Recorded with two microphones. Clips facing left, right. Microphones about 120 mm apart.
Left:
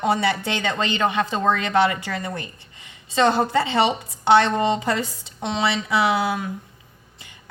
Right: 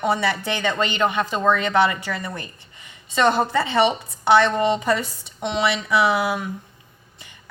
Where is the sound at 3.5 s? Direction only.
25° left (ahead or behind).